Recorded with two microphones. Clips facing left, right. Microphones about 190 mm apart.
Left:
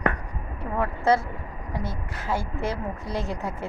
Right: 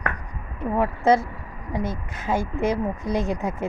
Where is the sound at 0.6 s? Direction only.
20° right (ahead or behind).